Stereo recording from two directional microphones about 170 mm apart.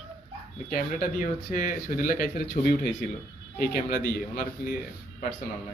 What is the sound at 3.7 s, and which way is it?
Speech, 55° left (ahead or behind).